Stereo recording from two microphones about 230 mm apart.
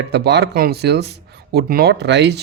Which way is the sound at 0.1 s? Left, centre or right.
Right.